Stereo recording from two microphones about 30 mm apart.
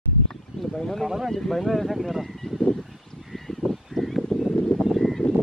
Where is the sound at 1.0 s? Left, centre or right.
Centre.